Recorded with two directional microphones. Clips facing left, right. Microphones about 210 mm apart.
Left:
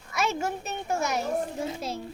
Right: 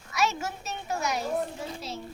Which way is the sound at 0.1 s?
55° left (ahead or behind).